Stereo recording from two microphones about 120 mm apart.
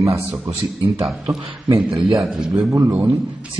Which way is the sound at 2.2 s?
Centre (ahead or behind).